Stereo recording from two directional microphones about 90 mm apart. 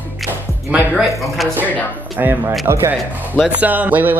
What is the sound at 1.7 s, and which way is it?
Speech, 20° left (ahead or behind).